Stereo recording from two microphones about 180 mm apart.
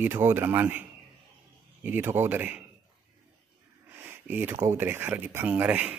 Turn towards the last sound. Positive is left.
turn(degrees=-10)  # may be behind; listen again after turning